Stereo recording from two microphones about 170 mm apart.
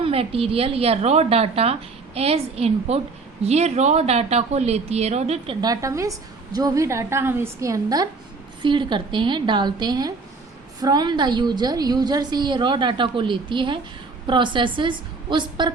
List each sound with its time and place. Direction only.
0.0 s a woman's voice: 35° right (ahead or behind)
5.5 s a woman's voice: 20° right (ahead or behind)